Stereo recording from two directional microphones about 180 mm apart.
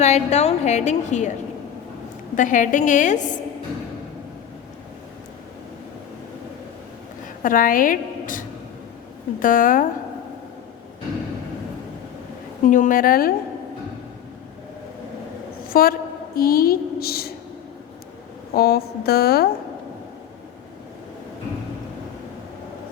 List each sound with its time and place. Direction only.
0.0 s a woman's voice: 40° left (ahead or behind)
2.3 s a woman's voice: 45° left (ahead or behind)
7.4 s a woman's voice: 50° left (ahead or behind)
12.6 s a woman's voice: 45° left (ahead or behind)
15.7 s a woman's voice: 55° left (ahead or behind)
18.5 s a woman's voice: 60° left (ahead or behind)